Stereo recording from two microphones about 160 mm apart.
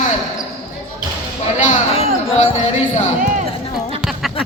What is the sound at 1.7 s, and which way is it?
Speech, 40° left (ahead or behind).